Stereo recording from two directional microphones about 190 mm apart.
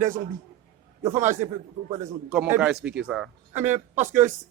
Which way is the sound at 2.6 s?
5° right (ahead or behind).